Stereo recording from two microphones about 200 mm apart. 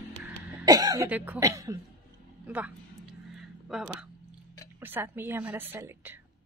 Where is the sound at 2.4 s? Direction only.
5° right (ahead or behind).